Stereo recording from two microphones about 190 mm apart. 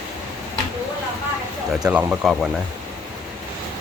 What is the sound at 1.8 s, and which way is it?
Speech, 5° right (ahead or behind).